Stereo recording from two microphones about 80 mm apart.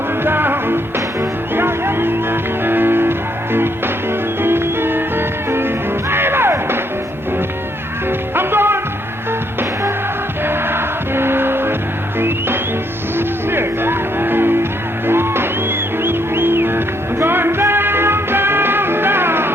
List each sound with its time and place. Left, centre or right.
0.3 s music: right
8.4 s music: right
10.4 s music: right
13.1 s music: right